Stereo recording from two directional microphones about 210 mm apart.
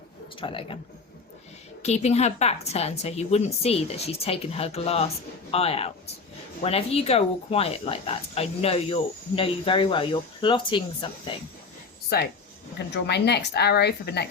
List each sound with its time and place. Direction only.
0.3 s speech: 25° left (ahead or behind)
1.8 s speech: 30° left (ahead or behind)
12.9 s a woman's voice: 55° left (ahead or behind)